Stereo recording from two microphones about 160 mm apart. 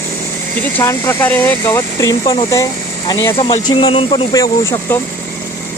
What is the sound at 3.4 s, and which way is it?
Speech, 35° left (ahead or behind).